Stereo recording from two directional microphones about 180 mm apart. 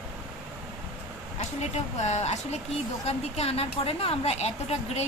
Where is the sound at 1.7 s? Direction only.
40° left (ahead or behind).